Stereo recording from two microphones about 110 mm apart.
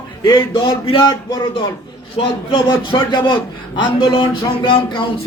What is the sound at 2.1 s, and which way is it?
Speech, 55° left (ahead or behind).